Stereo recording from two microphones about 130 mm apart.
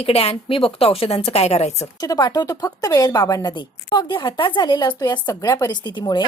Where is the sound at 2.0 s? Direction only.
30° left (ahead or behind).